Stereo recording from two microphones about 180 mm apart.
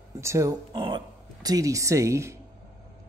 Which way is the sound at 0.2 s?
15° right (ahead or behind).